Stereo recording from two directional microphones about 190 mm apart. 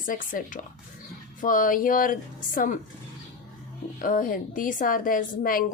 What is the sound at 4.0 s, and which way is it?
Speech, 45° left (ahead or behind).